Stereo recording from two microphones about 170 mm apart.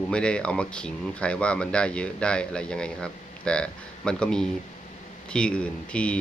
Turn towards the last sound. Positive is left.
turn(degrees=5)  # may be behind; listen again after turning